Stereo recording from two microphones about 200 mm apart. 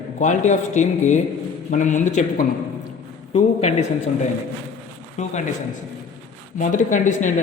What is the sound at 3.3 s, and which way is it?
Speech, 30° left (ahead or behind).